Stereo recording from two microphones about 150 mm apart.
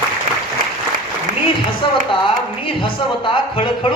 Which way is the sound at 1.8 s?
30° left (ahead or behind).